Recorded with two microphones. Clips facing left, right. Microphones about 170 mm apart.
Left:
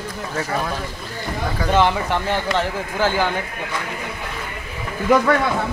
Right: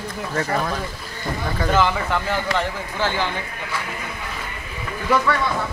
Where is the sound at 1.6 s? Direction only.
20° left (ahead or behind).